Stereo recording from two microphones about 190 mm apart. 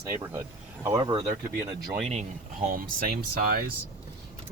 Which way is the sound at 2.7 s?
50° right (ahead or behind).